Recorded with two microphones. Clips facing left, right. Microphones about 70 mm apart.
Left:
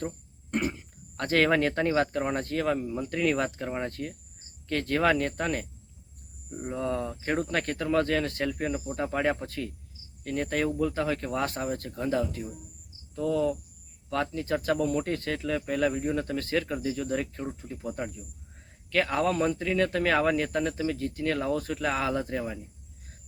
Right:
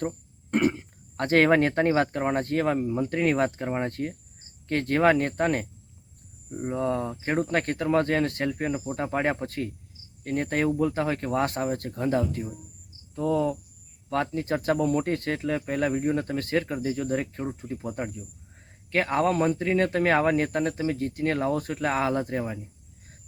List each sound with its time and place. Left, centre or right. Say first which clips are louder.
0.5 s cough: right 6 dB; right
1.1 s speech: right 4 dB; right